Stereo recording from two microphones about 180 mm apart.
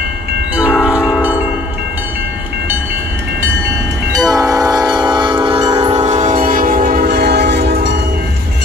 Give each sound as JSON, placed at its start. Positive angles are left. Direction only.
{"t": 0.6, "sound": "train horn", "side_deg": -5}
{"t": 1.1, "sound": "church bell", "side_deg": -10}
{"t": 4.2, "sound": "train horn", "side_deg": -20}
{"t": 5.9, "sound": "train", "side_deg": -40}